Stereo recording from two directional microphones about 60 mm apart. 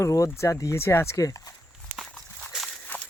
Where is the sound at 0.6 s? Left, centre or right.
Left.